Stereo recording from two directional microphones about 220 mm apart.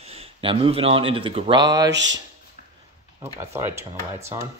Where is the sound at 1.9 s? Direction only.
55° right (ahead or behind).